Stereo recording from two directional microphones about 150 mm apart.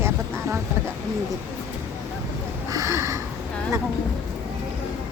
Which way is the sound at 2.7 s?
20° right (ahead or behind).